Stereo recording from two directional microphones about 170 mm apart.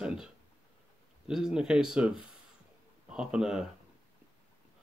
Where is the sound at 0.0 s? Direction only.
5° right (ahead or behind).